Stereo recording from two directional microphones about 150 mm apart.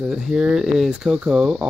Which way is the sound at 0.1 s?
5° right (ahead or behind).